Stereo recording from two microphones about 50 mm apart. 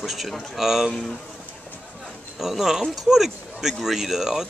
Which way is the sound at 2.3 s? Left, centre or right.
Centre.